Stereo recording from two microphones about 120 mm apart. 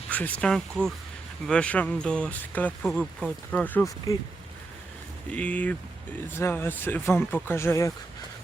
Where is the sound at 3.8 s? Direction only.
25° left (ahead or behind).